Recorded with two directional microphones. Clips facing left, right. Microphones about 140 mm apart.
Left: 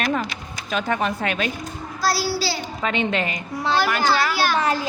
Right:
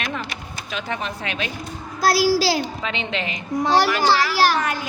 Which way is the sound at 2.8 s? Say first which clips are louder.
Left 4 dB; 45° left (ahead or behind).